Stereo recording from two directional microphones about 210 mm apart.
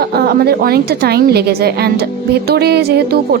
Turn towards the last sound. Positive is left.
turn(degrees=-50)  # may be behind; listen again after turning